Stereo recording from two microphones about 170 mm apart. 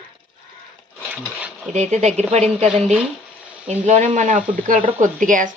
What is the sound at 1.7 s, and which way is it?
Speech, 40° right (ahead or behind).